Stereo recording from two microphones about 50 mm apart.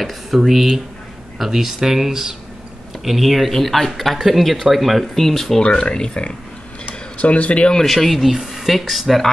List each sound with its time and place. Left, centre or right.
0.0 s speech: centre
5.6 s speech: centre
7.8 s speech: centre